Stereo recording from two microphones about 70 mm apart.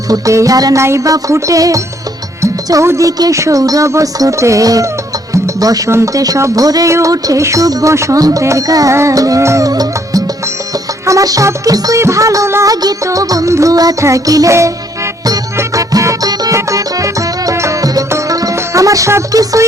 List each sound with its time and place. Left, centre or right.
0.1 s music: right
0.8 s speech: right
2.8 s speech: right
6.1 s music: right
6.9 s speech: right
7.4 s music: right
12.0 s speech: right
12.6 s music: right
14.0 s speech: right
15.5 s music: right